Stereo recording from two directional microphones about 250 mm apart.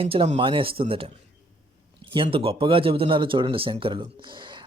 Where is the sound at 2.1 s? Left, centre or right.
Right.